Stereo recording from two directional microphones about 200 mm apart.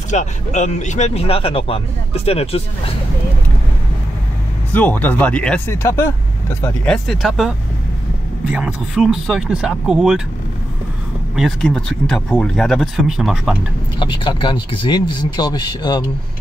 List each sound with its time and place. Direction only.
0.1 s speech: 35° left (ahead or behind)
4.7 s speech: 10° left (ahead or behind)
6.6 s speech: 5° left (ahead or behind)
11.3 s speech: centre (ahead or behind)
13.9 s speech: 25° left (ahead or behind)